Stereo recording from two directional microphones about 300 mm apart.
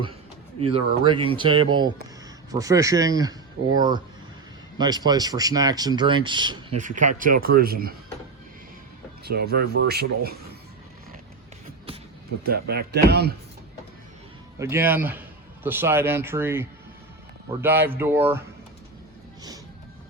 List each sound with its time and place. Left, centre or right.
0.6 s speech: centre
9.2 s speech: right
12.4 s speech: right
14.6 s speech: centre
17.8 s speech: centre